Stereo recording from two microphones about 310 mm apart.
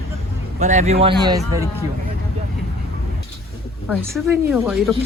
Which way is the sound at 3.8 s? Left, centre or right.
Centre.